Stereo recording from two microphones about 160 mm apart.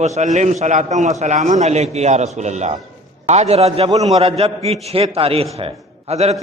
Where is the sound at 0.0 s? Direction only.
45° right (ahead or behind).